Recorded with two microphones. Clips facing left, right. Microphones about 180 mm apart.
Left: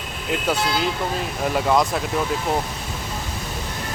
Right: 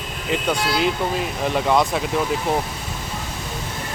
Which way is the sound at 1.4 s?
Centre (ahead or behind).